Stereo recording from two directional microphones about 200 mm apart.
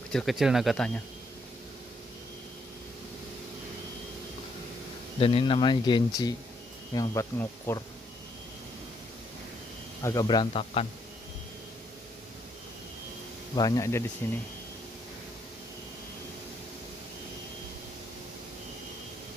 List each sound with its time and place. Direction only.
0.1 s speech: centre (ahead or behind)
5.2 s speech: 25° left (ahead or behind)
10.0 s speech: 20° left (ahead or behind)
13.6 s speech: 15° left (ahead or behind)